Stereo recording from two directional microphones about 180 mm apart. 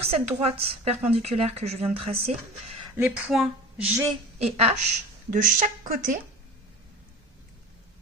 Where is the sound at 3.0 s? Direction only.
5° right (ahead or behind).